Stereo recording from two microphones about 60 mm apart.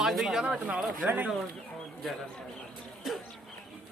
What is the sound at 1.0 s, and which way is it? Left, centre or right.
Speech, right.